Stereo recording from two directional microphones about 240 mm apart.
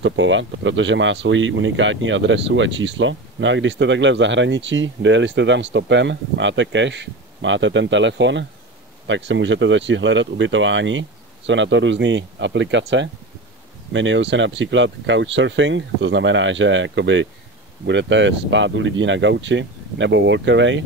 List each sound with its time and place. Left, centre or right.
0.0 s speech: right